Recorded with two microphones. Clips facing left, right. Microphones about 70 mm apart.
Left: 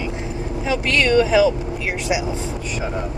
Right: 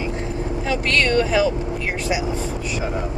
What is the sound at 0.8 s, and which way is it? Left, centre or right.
Speech, centre.